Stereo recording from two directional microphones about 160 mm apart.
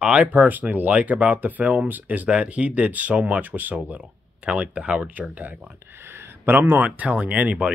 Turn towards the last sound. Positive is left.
turn(degrees=-10)  # may be behind; listen again after turning